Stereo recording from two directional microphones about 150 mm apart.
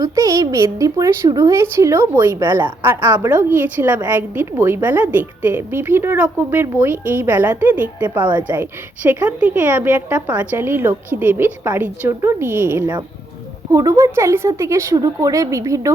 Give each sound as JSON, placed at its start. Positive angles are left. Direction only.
{"t": 0.0, "sound": "a woman's voice", "side_deg": -25}